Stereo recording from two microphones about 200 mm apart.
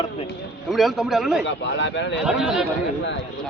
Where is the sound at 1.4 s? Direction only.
65° left (ahead or behind).